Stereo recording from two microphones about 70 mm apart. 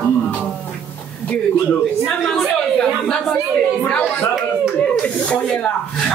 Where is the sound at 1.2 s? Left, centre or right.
Centre.